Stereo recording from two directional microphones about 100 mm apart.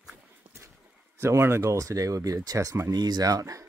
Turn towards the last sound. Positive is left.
turn(degrees=-35)  # may be behind; listen again after turning